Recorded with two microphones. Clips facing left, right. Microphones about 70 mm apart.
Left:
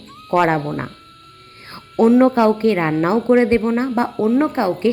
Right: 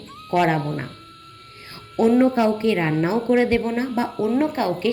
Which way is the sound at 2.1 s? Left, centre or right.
Left.